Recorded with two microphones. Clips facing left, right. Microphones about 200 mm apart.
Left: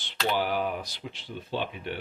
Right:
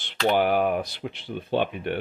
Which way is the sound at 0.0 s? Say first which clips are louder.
Right 6 dB; 55° right (ahead or behind).